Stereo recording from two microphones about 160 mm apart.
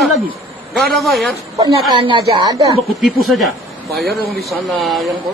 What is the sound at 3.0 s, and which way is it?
Speech, centre (ahead or behind).